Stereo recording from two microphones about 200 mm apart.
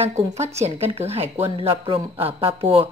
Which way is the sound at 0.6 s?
30° right (ahead or behind).